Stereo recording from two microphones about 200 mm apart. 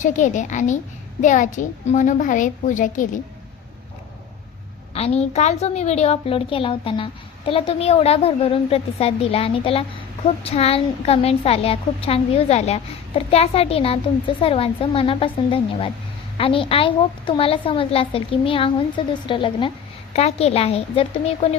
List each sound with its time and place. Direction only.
0.0 s a child's voice: 40° left (ahead or behind)
4.9 s a woman's voice: 30° left (ahead or behind)